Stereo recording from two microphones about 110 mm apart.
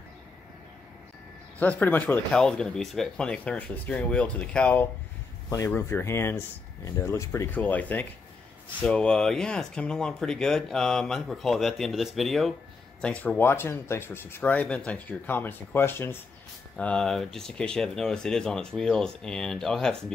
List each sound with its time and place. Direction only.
1.6 s speech: 15° left (ahead or behind)
2.3 s speech: 5° left (ahead or behind)
16.7 s speech: 5° left (ahead or behind)